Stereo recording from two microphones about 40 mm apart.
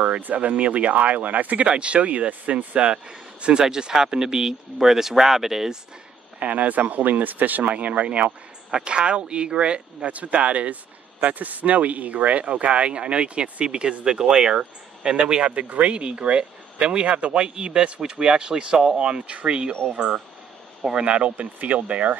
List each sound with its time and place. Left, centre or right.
0.2 s speech: right
1.7 s speech: right; by 5.8 s centre
6.4 s speech: right
15.4 s speech: right
21.4 s speech: right